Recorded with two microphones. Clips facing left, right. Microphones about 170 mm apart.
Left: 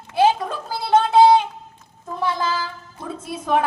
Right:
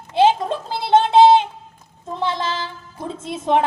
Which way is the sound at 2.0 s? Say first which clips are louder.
Even; 25° right (ahead or behind).